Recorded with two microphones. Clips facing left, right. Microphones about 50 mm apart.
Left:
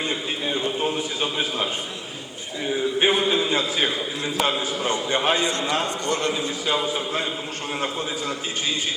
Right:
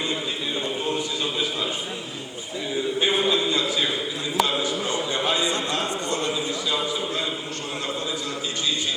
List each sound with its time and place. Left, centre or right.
1.2 s a man's voice: left
3.0 s a sound: left
4.9 s a man's voice: left
6.8 s a man's voice: left